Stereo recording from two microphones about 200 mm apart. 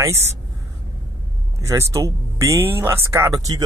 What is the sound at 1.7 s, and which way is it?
Speech, 15° right (ahead or behind).